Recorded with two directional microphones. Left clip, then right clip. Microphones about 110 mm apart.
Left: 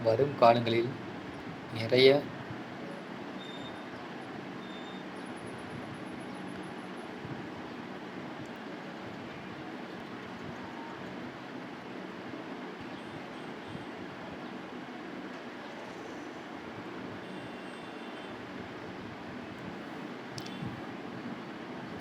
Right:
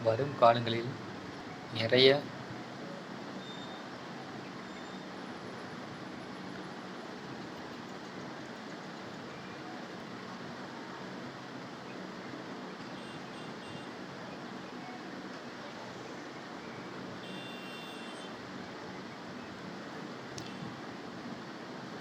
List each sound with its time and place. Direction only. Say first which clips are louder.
0.0 s a man's voice: left 2 dB; 25° left (ahead or behind)